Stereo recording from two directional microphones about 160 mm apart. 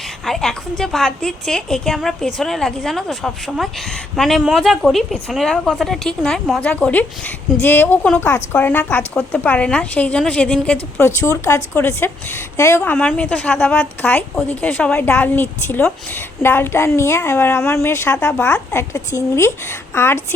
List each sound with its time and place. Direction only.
0.3 s a woman's voice: centre (ahead or behind)